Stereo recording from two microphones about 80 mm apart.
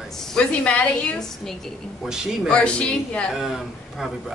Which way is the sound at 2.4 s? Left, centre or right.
Centre.